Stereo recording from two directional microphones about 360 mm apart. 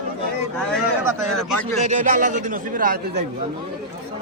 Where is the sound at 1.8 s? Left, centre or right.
Centre.